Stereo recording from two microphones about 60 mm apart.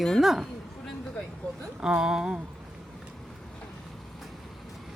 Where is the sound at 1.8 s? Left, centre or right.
Centre.